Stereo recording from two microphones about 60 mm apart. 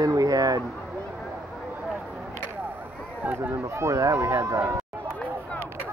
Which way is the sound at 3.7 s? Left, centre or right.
Right.